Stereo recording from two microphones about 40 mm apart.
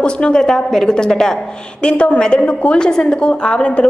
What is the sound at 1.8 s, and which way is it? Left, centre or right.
Speech, left.